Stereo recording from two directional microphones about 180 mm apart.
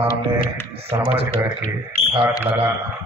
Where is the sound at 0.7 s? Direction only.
35° right (ahead or behind).